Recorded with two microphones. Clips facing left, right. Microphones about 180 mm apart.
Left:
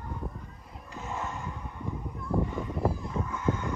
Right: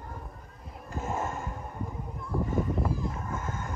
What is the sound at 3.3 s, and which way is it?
Fowl, 45° right (ahead or behind).